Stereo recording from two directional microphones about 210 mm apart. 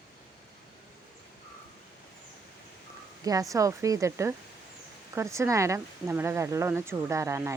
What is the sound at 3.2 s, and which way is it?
Speech, 15° right (ahead or behind).